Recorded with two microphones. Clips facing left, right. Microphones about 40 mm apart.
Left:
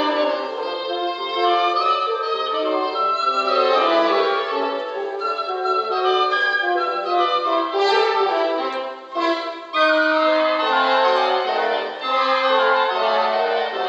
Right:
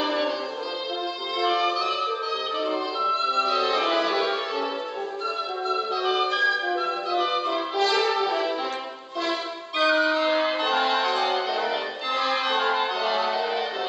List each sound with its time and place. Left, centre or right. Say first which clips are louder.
0.0 s music: left 5 dB; centre
1.4 s music: left 6 dB; centre
3.1 s music: left 1 dB; centre
5.7 s music: left 6 dB; centre